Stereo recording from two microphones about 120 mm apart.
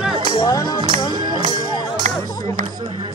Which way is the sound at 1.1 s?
35° right (ahead or behind).